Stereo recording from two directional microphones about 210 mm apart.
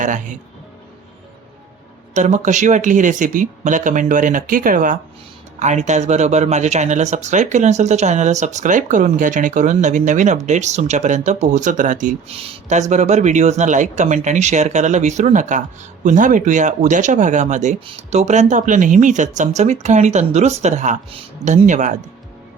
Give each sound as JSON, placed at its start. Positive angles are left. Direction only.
{"t": 0.0, "sound": "speech", "side_deg": -40}
{"t": 2.1, "sound": "speech", "side_deg": -35}